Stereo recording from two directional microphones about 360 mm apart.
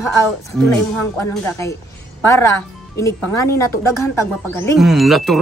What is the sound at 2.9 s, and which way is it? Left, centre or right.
Speech, centre.